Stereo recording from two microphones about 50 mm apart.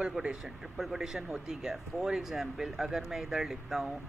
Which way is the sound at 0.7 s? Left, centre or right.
Centre.